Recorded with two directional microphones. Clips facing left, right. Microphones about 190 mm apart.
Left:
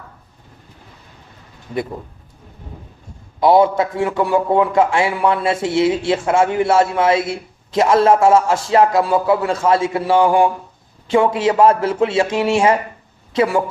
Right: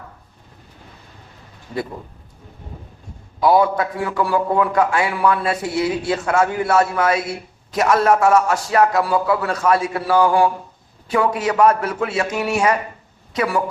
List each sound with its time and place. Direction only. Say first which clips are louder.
3.4 s a man's voice: left 3 dB; 25° left (ahead or behind)